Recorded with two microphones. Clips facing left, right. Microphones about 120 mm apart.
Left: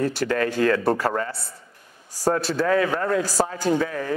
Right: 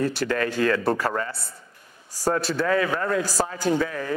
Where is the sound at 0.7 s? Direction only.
30° left (ahead or behind).